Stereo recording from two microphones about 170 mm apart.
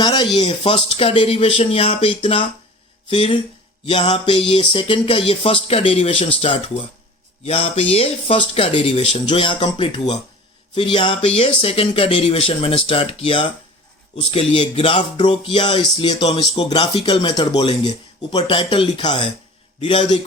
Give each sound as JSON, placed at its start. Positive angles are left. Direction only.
{"t": 0.0, "sound": "speech", "side_deg": 25}